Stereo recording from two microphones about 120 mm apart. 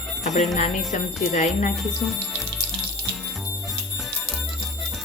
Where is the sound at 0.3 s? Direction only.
75° left (ahead or behind); by 1.7 s 90° left.